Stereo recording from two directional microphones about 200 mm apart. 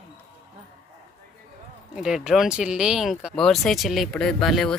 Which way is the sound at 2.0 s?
5° right (ahead or behind).